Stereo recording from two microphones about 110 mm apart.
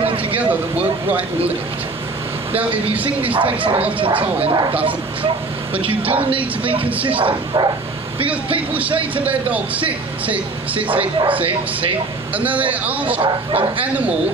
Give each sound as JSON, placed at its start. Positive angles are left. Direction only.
{"t": 0.0, "sound": "a sound", "side_deg": -55}
{"t": 0.4, "sound": "speech", "side_deg": -15}
{"t": 2.5, "sound": "speech", "side_deg": -15}
{"t": 3.3, "sound": "speech", "side_deg": -55}
{"t": 4.5, "sound": "speech", "side_deg": -40}
{"t": 5.8, "sound": "speech", "side_deg": -55}
{"t": 7.2, "sound": "speech", "side_deg": -40}
{"t": 8.5, "sound": "speech", "side_deg": -15}
{"t": 11.0, "sound": "speech", "side_deg": -50}
{"t": 12.4, "sound": "speech", "side_deg": -15}
{"t": 13.2, "sound": "speech", "side_deg": -55}